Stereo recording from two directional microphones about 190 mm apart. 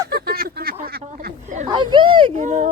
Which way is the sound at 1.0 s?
40° right (ahead or behind).